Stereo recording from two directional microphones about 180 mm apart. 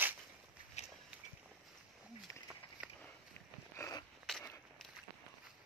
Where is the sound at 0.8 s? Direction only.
35° left (ahead or behind).